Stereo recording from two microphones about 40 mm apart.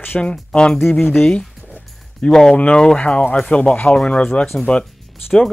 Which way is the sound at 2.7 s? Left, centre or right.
Left.